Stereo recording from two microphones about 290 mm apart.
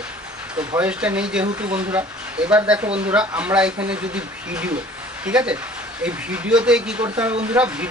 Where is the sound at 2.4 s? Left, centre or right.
Centre.